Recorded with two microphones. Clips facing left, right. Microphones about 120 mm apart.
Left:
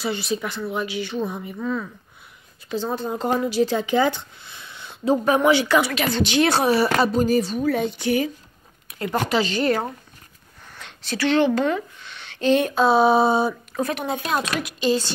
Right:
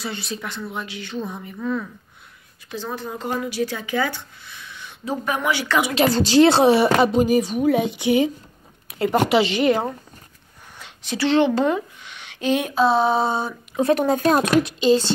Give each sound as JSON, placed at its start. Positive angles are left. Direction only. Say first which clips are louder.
{"t": 0.0, "sound": "speech", "louder": "left 5 dB", "side_deg": 5}
{"t": 2.7, "sound": "speech", "louder": "left 4 dB", "side_deg": 25}
{"t": 5.9, "sound": "a woman's voice", "louder": "right 5 dB", "side_deg": -35}
{"t": 11.1, "sound": "a woman's voice", "louder": "right 1 dB", "side_deg": -25}
{"t": 13.9, "sound": "speech", "louder": "right 7 dB", "side_deg": -40}
{"t": 14.8, "sound": "a woman's voice", "louder": "right 1 dB", "side_deg": -20}